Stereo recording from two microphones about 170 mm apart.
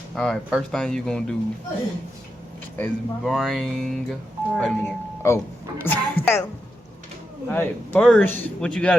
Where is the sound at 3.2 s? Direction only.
Centre (ahead or behind).